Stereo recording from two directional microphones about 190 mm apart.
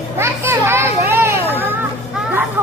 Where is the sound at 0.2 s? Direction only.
15° right (ahead or behind).